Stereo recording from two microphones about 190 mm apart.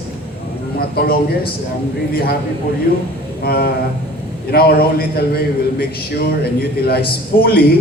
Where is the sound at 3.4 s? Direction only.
55° left (ahead or behind).